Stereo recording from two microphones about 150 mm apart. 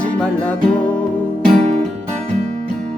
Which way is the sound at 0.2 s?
10° left (ahead or behind).